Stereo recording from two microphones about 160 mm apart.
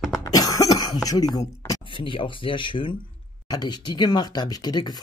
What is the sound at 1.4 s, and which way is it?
Speech, 30° left (ahead or behind).